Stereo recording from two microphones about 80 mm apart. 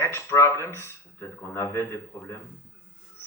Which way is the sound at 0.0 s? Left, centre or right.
Left.